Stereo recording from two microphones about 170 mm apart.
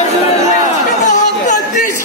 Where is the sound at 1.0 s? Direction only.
45° left (ahead or behind).